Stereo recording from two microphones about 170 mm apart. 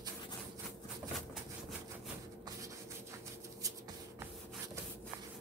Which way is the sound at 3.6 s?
20° right (ahead or behind).